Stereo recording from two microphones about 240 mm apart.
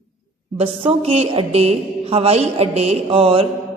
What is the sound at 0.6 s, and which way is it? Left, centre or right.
A woman's voice, right.